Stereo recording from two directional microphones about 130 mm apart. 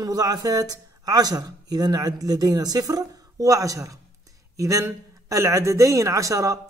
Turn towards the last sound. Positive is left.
turn(degrees=-25)  # may be behind; listen again after turning